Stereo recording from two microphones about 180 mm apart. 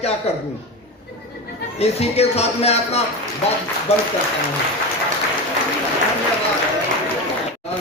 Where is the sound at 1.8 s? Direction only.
35° left (ahead or behind).